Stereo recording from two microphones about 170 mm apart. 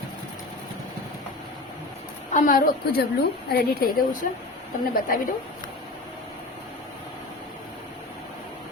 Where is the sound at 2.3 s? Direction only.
60° left (ahead or behind).